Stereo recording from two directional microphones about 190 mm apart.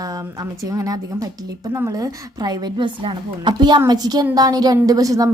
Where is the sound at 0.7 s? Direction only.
20° right (ahead or behind).